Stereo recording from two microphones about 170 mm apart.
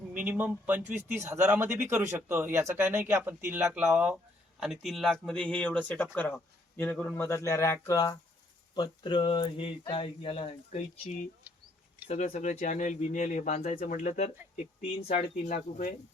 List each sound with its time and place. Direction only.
0.1 s speech: 10° right (ahead or behind); by 10.8 s 35° left (ahead or behind)
12.0 s speech: 40° left (ahead or behind)
15.0 s speech: 60° left (ahead or behind)